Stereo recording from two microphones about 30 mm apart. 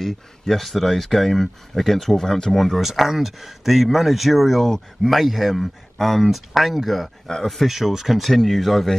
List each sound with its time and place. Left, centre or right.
0.5 s speech: centre
2.8 s speech: centre
7.3 s speech: centre
7.6 s speech: centre
8.2 s speech: centre